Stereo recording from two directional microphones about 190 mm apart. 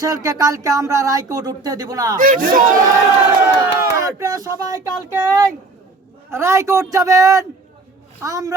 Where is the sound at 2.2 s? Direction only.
45° right (ahead or behind).